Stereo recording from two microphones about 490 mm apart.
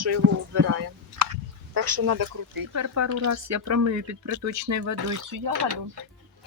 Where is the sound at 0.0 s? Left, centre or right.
Right.